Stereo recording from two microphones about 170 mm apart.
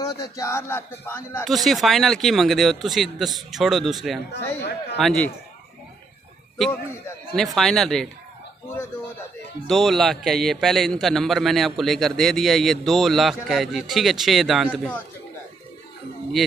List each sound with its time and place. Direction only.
0.0 s speech: 20° left (ahead or behind)
1.4 s a man's voice: centre (ahead or behind)
4.3 s a man's voice: 85° left
4.9 s a man's voice: 5° left (ahead or behind)
6.6 s a man's voice: 5° left (ahead or behind)
9.7 s a man's voice: centre (ahead or behind)
16.4 s speech: centre (ahead or behind)